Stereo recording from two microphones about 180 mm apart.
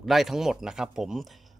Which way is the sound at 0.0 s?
Centre (ahead or behind).